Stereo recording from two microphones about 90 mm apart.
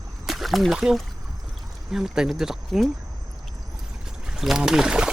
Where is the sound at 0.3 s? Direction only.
Centre (ahead or behind).